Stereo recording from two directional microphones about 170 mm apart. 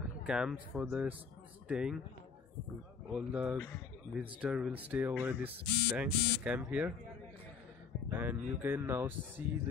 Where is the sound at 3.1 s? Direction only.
5° right (ahead or behind).